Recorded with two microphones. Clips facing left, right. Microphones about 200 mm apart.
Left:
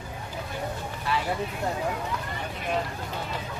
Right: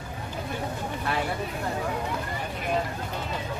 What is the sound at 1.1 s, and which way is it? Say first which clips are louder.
Vehicle: left 1 dB; 55° right (ahead or behind).